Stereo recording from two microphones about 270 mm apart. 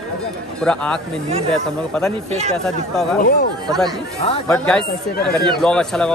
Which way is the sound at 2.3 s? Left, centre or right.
Right.